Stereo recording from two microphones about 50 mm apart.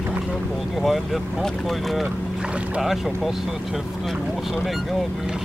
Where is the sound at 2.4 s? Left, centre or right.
Right.